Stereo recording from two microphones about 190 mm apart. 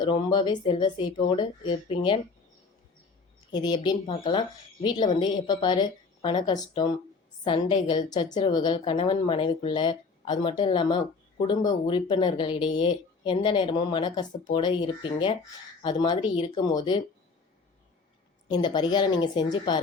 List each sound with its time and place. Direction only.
0.0 s a woman's voice: 25° left (ahead or behind)
3.5 s a woman's voice: 20° left (ahead or behind)
18.4 s a woman's voice: 20° left (ahead or behind)